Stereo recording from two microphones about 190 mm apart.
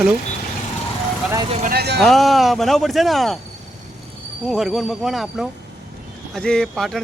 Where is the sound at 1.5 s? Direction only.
30° right (ahead or behind).